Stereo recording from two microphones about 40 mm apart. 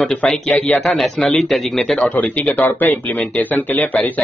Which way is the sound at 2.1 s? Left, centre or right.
Left.